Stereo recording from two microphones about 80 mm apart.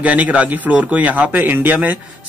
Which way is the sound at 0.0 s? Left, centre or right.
Centre.